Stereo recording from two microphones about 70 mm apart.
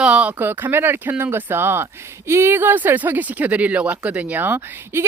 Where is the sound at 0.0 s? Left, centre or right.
Centre.